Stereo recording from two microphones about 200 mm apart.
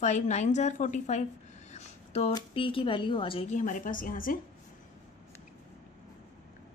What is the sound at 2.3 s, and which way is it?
Speech, 25° left (ahead or behind).